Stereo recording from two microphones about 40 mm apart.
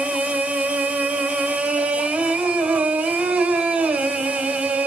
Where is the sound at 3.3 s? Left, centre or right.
Right.